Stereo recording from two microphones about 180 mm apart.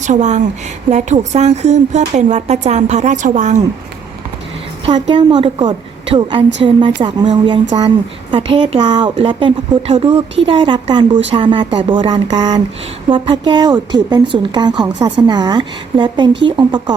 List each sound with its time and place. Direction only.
0.0 s speech: 40° right (ahead or behind)
4.9 s a woman's voice: 25° right (ahead or behind)